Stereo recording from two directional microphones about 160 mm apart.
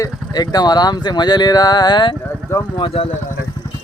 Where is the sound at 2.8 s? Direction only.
35° left (ahead or behind).